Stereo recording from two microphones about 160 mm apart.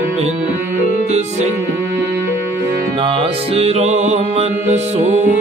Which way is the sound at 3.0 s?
30° right (ahead or behind).